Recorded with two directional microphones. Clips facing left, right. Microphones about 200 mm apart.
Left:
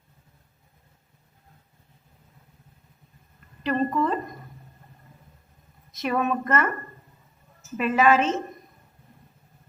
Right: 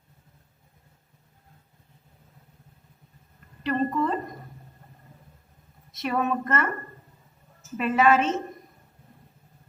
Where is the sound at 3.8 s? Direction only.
45° right (ahead or behind).